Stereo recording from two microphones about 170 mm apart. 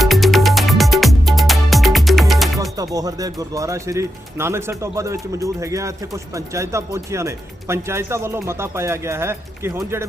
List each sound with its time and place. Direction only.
0.0 s music: centre (ahead or behind)
2.6 s speech: 20° right (ahead or behind)